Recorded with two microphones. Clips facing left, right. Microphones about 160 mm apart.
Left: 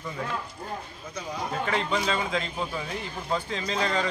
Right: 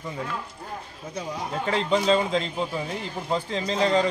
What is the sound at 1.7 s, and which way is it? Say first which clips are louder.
A man's voice: right 7 dB; 30° right (ahead or behind).